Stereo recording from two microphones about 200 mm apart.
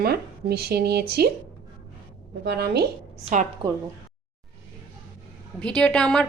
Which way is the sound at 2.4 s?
55° right (ahead or behind).